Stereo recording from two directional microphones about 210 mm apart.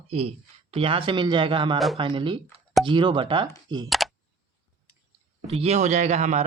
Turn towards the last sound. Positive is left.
turn(degrees=-35)  # may be behind; listen again after turning